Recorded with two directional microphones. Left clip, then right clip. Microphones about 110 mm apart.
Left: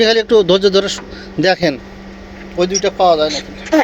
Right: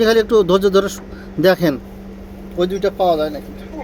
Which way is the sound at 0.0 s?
20° right (ahead or behind).